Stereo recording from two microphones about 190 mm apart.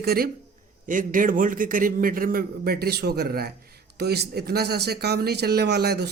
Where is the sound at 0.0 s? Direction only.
55° right (ahead or behind).